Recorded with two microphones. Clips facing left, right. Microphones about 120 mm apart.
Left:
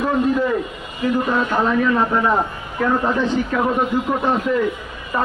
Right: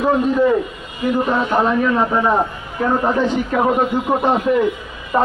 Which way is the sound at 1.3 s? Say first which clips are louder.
Right 2 dB; 20° right (ahead or behind).